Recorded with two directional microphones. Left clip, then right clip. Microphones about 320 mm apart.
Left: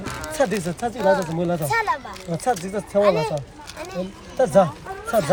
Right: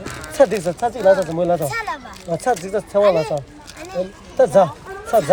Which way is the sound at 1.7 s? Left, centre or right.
Centre.